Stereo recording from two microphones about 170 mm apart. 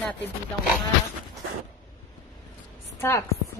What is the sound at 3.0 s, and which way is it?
Speech, 15° left (ahead or behind).